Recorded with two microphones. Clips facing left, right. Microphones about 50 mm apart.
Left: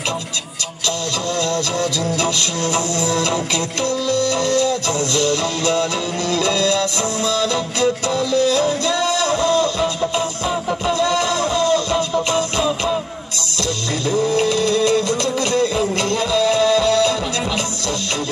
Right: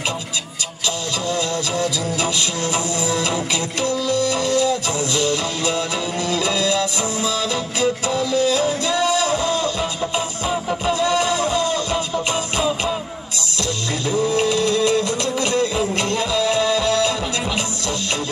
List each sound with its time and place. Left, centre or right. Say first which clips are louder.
2.1 s music: left 2 dB; centre
14.3 s music: left 1 dB; centre